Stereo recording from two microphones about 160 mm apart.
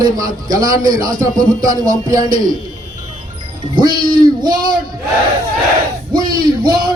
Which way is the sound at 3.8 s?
25° right (ahead or behind).